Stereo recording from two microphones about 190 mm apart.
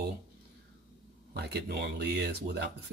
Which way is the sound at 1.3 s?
60° right (ahead or behind).